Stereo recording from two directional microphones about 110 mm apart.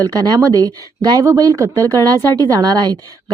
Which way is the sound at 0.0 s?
35° right (ahead or behind).